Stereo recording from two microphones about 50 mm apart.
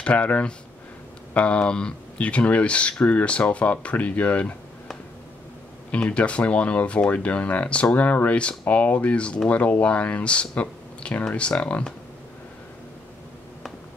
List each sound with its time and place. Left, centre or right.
0.0 s speech: left
5.9 s speech: left